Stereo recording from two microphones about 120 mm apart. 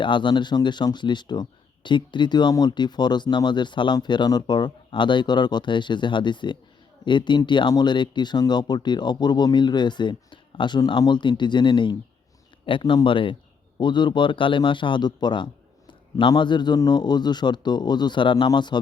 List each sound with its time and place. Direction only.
0.0 s speech: 40° left (ahead or behind)